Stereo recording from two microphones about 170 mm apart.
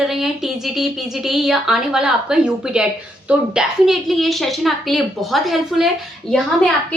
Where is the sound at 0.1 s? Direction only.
Centre (ahead or behind).